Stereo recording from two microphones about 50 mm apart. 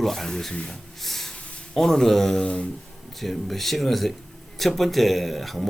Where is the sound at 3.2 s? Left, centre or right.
Centre.